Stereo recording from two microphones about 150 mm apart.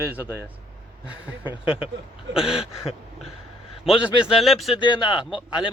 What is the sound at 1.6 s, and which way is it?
Speech, 35° left (ahead or behind).